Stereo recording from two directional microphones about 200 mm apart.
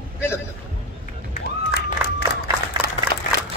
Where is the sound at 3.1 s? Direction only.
35° left (ahead or behind).